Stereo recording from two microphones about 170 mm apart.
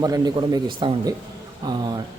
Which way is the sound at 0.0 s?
20° right (ahead or behind).